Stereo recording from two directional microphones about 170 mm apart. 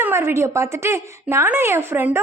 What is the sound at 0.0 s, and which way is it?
Speech, 15° right (ahead or behind).